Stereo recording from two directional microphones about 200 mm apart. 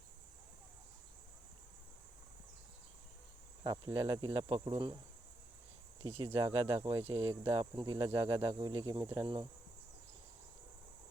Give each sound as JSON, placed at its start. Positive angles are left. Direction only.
{"t": 3.6, "sound": "cricket", "side_deg": -20}
{"t": 6.0, "sound": "speech", "side_deg": -25}
{"t": 7.9, "sound": "cricket", "side_deg": -20}
{"t": 8.8, "sound": "speech", "side_deg": -20}
{"t": 9.2, "sound": "cricket", "side_deg": -25}